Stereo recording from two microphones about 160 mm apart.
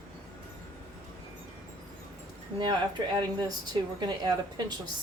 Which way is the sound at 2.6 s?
30° right (ahead or behind).